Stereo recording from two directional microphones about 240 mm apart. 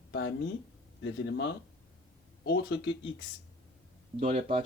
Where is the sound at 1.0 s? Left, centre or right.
Left.